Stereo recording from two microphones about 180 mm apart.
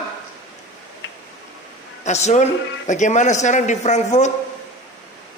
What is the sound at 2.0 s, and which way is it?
Speech, 40° left (ahead or behind).